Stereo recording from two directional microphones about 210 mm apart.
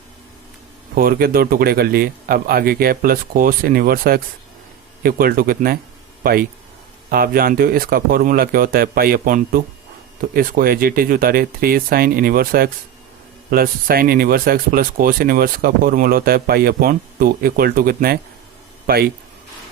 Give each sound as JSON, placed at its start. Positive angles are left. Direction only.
{"t": 0.9, "sound": "speech", "side_deg": -45}